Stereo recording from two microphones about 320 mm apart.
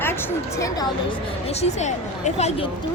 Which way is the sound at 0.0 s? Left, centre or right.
Centre.